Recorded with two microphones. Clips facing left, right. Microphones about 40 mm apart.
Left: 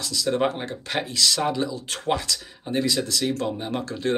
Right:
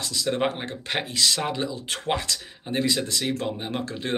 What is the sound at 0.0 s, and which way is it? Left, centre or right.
Speech, right.